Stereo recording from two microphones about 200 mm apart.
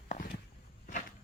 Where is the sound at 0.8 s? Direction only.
40° left (ahead or behind).